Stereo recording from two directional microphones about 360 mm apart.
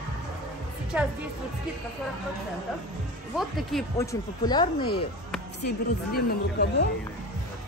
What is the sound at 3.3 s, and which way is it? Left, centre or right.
Speech, centre.